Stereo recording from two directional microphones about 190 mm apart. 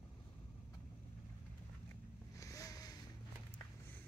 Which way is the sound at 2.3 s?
15° left (ahead or behind).